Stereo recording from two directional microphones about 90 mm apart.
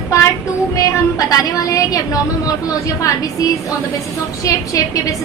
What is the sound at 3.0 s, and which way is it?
Speech, 40° left (ahead or behind).